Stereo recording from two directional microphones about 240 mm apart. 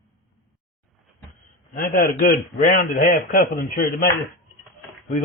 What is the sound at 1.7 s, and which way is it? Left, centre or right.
A man's voice, left.